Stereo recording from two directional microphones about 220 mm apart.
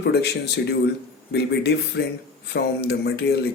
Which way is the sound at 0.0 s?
50° left (ahead or behind).